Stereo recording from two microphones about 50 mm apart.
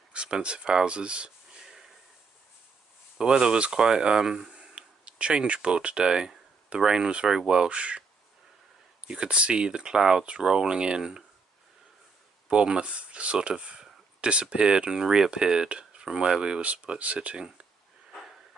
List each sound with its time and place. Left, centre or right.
0.1 s speech: right
3.2 s speech: centre
9.0 s speech: centre
12.4 s speech: centre